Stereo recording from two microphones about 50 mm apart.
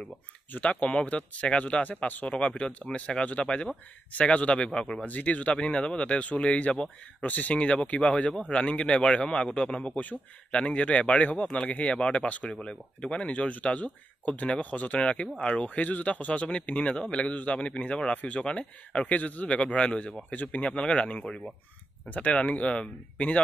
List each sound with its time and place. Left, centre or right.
0.6 s a man's voice: left
4.7 s speech: centre
5.0 s a man's voice: left
7.2 s a man's voice: left
13.3 s a man's voice: left